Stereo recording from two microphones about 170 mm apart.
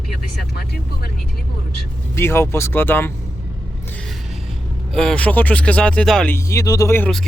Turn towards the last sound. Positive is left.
turn(degrees=15)  # may be behind; listen again after turning